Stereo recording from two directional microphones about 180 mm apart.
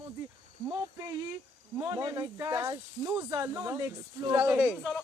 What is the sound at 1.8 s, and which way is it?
Speech, 20° right (ahead or behind).